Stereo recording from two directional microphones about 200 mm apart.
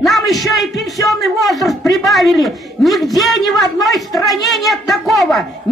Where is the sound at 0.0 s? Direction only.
Centre (ahead or behind).